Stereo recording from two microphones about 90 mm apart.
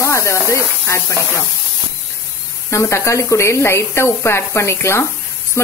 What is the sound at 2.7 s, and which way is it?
Speech, 35° left (ahead or behind).